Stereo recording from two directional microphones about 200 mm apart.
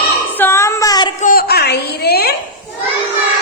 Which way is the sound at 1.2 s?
45° left (ahead or behind).